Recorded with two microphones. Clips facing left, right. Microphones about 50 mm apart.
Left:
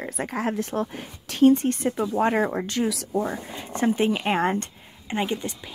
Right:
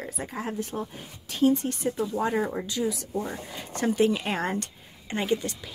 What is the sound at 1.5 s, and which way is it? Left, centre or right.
A woman's voice, left.